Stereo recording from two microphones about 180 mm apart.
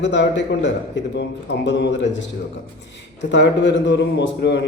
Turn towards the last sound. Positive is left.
turn(degrees=75)  # may be behind; listen again after turning